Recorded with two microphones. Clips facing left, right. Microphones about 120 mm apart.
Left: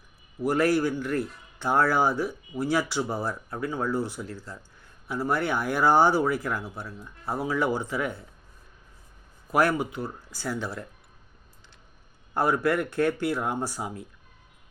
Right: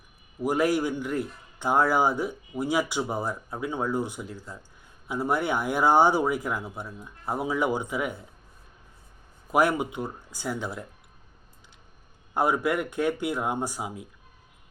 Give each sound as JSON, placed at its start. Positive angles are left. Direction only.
{"t": 0.4, "sound": "speech", "side_deg": -15}
{"t": 9.5, "sound": "speech", "side_deg": -15}
{"t": 12.3, "sound": "speech", "side_deg": -15}